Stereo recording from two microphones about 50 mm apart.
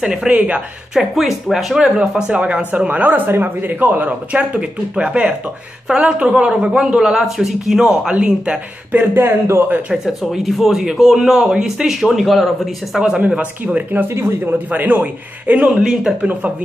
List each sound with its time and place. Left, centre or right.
0.0 s a man's voice: centre
0.3 s speech: right
0.9 s a man's voice: centre
2.3 s speech: right
3.3 s a man's voice: right; by 8.5 s centre
9.1 s speech: right
10.2 s a man's voice: centre
13.9 s a man's voice: right
15.7 s a man's voice: centre